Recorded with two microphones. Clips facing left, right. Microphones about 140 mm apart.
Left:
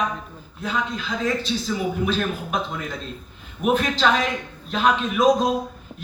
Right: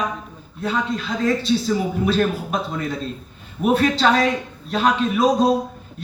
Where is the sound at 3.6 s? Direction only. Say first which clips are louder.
Right 3 dB; 35° right (ahead or behind).